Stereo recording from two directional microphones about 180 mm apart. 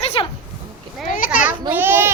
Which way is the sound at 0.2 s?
30° left (ahead or behind).